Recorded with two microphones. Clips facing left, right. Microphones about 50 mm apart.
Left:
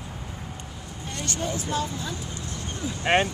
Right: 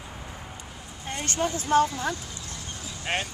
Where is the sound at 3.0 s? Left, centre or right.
Left.